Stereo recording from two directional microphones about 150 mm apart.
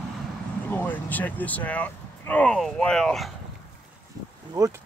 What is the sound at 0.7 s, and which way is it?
Speech, 10° left (ahead or behind).